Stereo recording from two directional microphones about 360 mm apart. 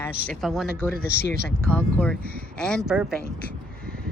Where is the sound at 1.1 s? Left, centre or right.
Right.